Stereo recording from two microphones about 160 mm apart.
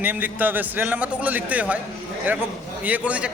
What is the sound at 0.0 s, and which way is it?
A man's voice, 10° right (ahead or behind).